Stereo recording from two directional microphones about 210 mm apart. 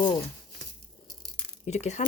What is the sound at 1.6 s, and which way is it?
Speech, 30° left (ahead or behind).